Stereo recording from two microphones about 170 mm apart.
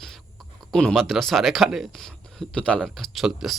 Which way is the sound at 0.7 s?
5° left (ahead or behind).